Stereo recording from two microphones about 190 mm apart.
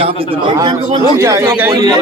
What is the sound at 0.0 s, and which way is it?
Speech, 30° right (ahead or behind).